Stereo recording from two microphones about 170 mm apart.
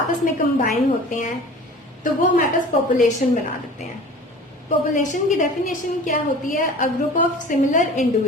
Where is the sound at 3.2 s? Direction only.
50° left (ahead or behind).